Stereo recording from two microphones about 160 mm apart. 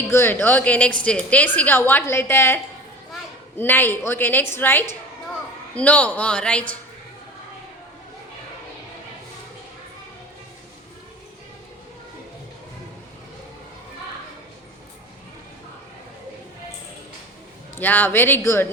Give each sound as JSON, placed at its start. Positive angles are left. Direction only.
{"t": 0.1, "sound": "a woman's voice", "side_deg": 15}
{"t": 3.6, "sound": "a woman's voice", "side_deg": 15}
{"t": 17.7, "sound": "a woman's voice", "side_deg": 10}